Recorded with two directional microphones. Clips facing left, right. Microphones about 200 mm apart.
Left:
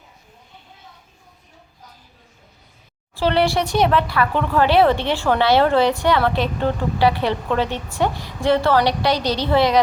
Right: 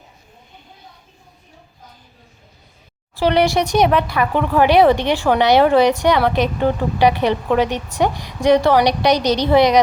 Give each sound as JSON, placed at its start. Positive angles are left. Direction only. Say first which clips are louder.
{"t": 3.2, "sound": "speech", "louder": "right 3 dB", "side_deg": -15}